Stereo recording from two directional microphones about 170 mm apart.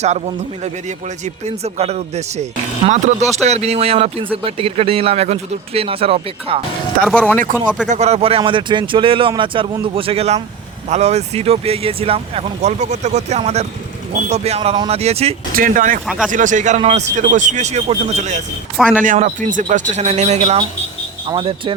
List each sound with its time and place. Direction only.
0.6 s speech: 45° right (ahead or behind)
7.0 s speech: 5° left (ahead or behind)
7.9 s speech: 40° right (ahead or behind)
15.5 s speech: 55° right (ahead or behind)
16.0 s speech: 5° right (ahead or behind)
16.3 s speech: 50° right (ahead or behind); by 21.7 s 30° right (ahead or behind)